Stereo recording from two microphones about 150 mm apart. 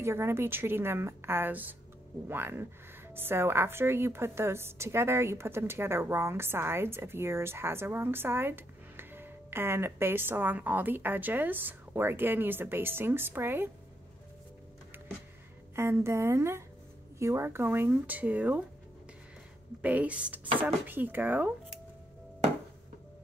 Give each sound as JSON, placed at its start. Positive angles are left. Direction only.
{"t": 0.0, "sound": "speech", "side_deg": -15}
{"t": 15.7, "sound": "speech", "side_deg": -15}
{"t": 19.8, "sound": "speech", "side_deg": -10}